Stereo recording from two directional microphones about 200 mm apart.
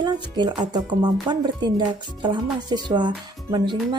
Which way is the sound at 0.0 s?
20° right (ahead or behind).